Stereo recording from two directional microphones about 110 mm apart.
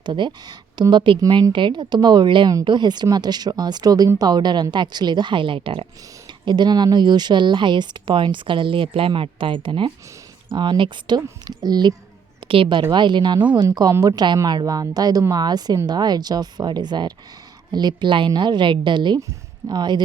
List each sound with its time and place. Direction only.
0.0 s speech: 45° right (ahead or behind)
12.4 s a woman's voice: 55° right (ahead or behind)